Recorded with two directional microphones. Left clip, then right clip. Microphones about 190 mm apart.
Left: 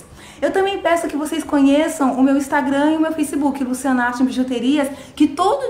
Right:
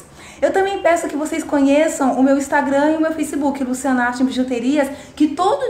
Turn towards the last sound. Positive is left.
turn(degrees=5)  # may be behind; listen again after turning